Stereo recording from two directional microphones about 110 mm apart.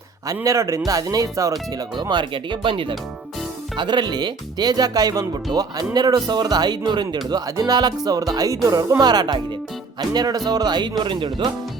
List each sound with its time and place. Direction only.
0.4 s speech: 30° right (ahead or behind)
1.7 s speech: 40° right (ahead or behind)